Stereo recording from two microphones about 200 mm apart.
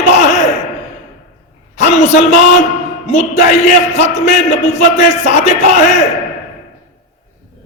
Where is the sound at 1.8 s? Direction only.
35° left (ahead or behind).